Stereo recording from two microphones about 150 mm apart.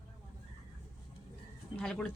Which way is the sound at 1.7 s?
5° left (ahead or behind).